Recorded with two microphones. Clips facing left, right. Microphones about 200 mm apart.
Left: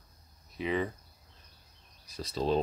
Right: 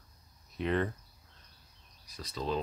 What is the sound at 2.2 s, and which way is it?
Speech, 30° left (ahead or behind).